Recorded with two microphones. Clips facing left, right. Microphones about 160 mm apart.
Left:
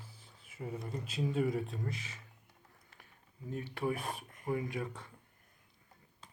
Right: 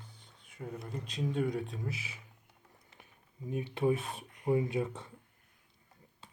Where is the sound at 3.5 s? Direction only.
20° right (ahead or behind).